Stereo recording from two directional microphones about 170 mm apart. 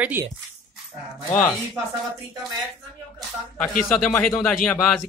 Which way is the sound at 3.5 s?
5° left (ahead or behind).